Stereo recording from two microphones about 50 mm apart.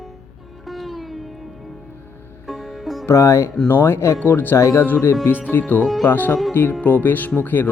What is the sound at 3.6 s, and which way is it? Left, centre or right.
Speech, left.